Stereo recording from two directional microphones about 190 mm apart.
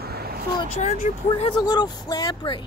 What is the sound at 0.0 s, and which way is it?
Vehicle, 55° right (ahead or behind).